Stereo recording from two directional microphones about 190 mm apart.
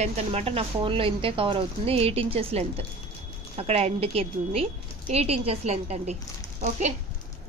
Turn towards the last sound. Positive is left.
turn(degrees=-35)  # may be behind; listen again after turning